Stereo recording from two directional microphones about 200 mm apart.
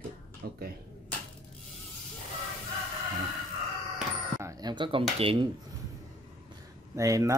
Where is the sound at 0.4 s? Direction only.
50° right (ahead or behind).